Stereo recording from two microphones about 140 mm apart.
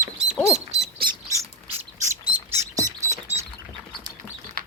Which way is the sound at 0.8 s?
40° right (ahead or behind).